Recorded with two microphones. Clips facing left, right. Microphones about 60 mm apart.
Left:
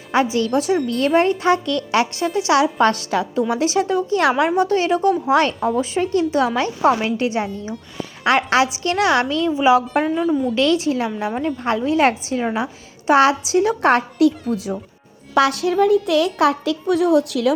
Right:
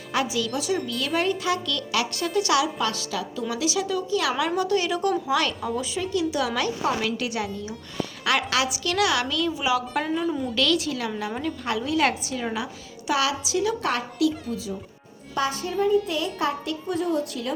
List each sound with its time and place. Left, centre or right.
0.1 s a woman's voice: left
2.6 s a woman's voice: left
10.1 s a woman's voice: centre
10.5 s a woman's voice: left
14.5 s speech: left
15.4 s a child's voice: left